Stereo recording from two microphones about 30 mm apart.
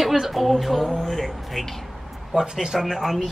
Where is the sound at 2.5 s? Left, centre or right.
Centre.